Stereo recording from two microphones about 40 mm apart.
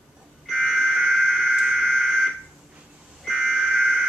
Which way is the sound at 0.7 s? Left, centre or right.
Centre.